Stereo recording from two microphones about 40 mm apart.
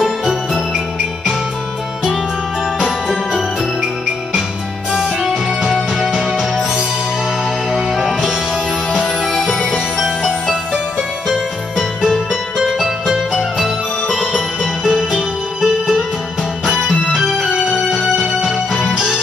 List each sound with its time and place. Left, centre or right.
0.0 s music: centre
2.8 s music: centre
7.7 s music: centre
10.7 s music: centre
15.0 s music: centre
17.9 s music: centre